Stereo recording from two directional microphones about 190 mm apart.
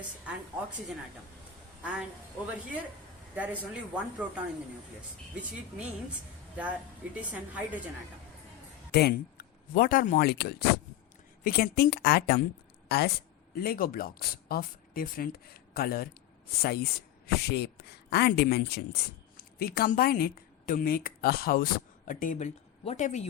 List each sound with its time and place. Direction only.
1.8 s speech: 5° right (ahead or behind)
3.3 s a woman's voice: 10° right (ahead or behind)
8.9 s a woman's voice: 60° left (ahead or behind); by 23.2 s 40° left (ahead or behind)